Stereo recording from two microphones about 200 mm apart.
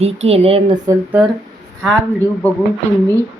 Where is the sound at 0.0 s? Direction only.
30° right (ahead or behind).